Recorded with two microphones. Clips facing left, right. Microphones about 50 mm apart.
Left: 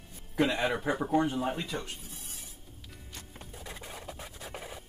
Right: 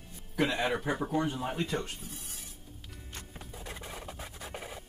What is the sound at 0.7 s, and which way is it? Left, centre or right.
Speech, centre.